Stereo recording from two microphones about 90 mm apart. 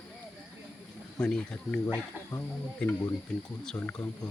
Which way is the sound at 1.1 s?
10° left (ahead or behind).